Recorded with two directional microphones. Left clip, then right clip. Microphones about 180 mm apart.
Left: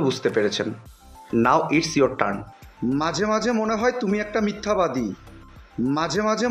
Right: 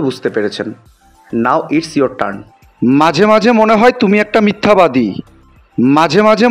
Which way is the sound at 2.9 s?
50° right (ahead or behind).